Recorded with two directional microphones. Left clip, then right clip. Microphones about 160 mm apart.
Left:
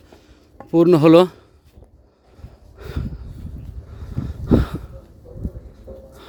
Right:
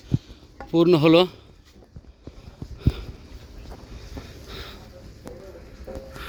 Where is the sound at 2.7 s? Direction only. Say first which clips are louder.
Right 1 dB; 70° left (ahead or behind).